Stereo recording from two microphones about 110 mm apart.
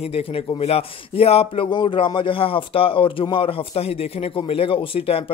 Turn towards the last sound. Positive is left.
turn(degrees=60)  # may be behind; listen again after turning